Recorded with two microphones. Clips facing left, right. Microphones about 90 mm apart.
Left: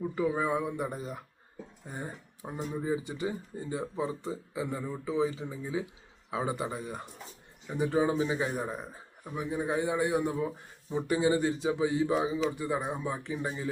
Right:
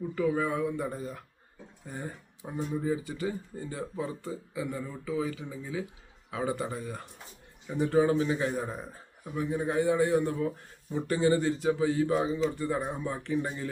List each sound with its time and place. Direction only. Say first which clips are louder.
0.2 s speech: right 1 dB; 20° left (ahead or behind)